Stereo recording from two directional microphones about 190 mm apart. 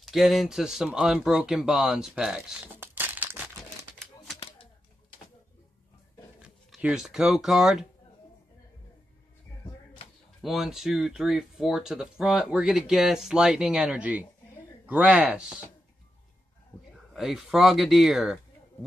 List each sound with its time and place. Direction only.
0.0 s speech: centre (ahead or behind)
4.4 s a sound: 30° left (ahead or behind)
6.4 s speech: 5° right (ahead or behind)
10.4 s speech: centre (ahead or behind)
17.1 s speech: centre (ahead or behind)